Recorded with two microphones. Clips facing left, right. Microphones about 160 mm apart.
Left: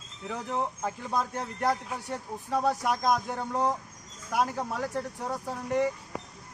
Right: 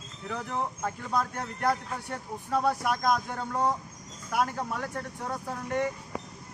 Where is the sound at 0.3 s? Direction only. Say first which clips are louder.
Left 1 dB; 15° left (ahead or behind).